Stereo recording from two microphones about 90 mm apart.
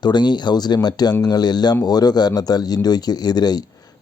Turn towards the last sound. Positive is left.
turn(degrees=50)  # may be behind; listen again after turning